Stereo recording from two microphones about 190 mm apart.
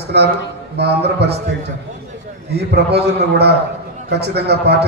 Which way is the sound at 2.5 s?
60° right (ahead or behind).